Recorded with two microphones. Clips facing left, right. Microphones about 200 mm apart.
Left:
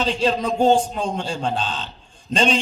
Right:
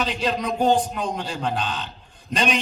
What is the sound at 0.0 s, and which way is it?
A man's voice, 30° left (ahead or behind).